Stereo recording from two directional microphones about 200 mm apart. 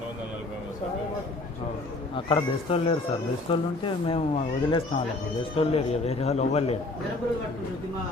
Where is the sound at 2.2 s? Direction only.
25° left (ahead or behind).